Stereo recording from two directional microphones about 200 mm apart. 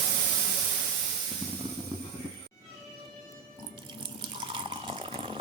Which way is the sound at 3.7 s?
25° right (ahead or behind).